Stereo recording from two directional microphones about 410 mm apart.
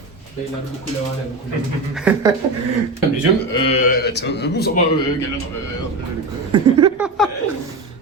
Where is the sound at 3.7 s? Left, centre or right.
Left.